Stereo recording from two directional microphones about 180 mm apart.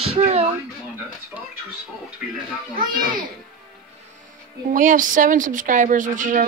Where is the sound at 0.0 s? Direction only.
35° right (ahead or behind).